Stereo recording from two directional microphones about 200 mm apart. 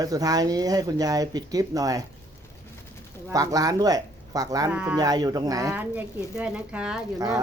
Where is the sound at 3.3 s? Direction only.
15° right (ahead or behind).